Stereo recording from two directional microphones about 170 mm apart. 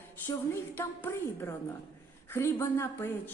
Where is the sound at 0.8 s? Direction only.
15° left (ahead or behind).